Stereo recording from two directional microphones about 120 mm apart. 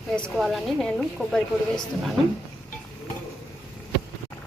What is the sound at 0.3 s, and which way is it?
A woman's voice, centre (ahead or behind).